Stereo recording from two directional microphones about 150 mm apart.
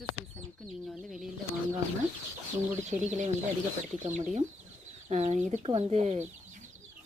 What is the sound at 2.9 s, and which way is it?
Speech, 50° right (ahead or behind).